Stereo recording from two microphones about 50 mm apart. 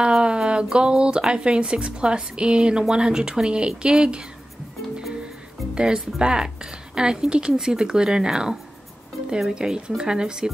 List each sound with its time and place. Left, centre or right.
0.0 s a woman's voice: centre
5.8 s a woman's voice: centre